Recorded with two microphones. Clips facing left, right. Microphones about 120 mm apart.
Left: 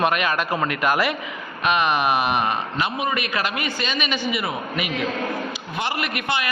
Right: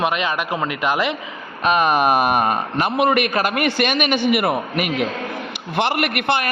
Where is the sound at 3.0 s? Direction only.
65° right (ahead or behind).